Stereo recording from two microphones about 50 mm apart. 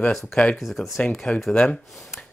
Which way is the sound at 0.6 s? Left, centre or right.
Centre.